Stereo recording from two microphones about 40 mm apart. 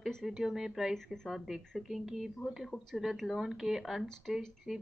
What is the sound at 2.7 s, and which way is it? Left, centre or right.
Speech, left.